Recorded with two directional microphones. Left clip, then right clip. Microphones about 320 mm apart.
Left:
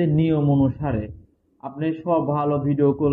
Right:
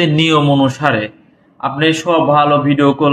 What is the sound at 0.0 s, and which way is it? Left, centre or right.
A man's voice, centre.